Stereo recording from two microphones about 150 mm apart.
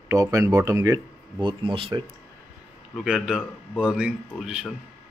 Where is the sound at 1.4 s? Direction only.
35° right (ahead or behind).